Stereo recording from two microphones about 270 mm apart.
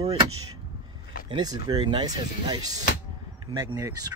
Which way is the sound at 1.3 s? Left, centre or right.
Centre.